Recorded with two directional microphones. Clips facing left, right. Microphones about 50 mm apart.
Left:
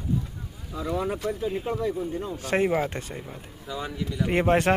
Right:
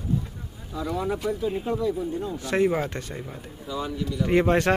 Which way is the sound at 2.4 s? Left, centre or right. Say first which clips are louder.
Even; left.